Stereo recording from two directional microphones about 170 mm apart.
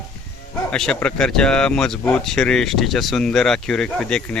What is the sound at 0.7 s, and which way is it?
Speech, 5° left (ahead or behind).